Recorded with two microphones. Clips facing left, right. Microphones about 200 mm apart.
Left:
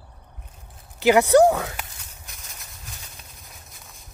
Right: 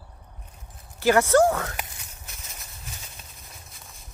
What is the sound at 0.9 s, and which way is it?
Speech, 15° left (ahead or behind).